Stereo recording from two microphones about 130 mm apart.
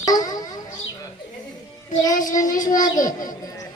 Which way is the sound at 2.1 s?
90° left.